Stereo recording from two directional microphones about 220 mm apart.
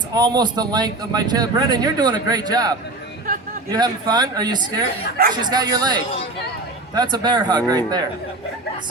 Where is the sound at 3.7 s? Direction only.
20° right (ahead or behind).